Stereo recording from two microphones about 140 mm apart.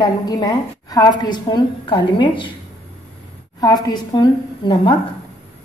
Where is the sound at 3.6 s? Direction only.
25° left (ahead or behind).